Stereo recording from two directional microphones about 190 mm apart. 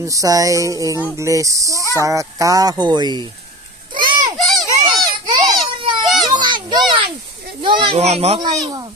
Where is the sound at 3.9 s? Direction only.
25° right (ahead or behind).